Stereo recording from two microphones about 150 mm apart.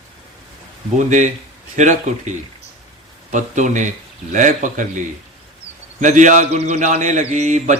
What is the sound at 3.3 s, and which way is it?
Speech, 55° right (ahead or behind).